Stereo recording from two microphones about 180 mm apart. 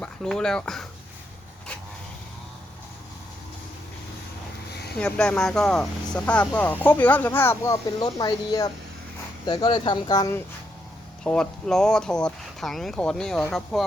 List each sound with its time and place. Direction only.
0.0 s speech: 5° left (ahead or behind)
4.9 s speech: 5° left (ahead or behind)
11.2 s speech: 5° left (ahead or behind)